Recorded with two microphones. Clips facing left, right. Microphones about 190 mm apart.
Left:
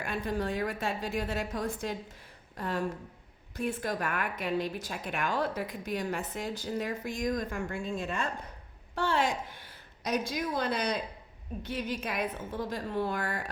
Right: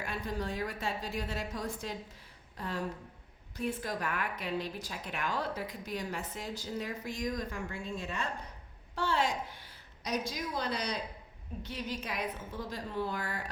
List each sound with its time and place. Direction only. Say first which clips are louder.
0.0 s a woman's voice: left 4 dB; 55° left (ahead or behind)